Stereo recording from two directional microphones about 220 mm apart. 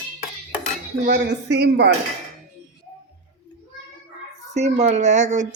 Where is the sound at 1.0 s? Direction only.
45° right (ahead or behind).